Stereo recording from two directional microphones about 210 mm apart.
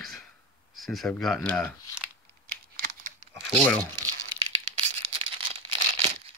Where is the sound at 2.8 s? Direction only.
40° right (ahead or behind).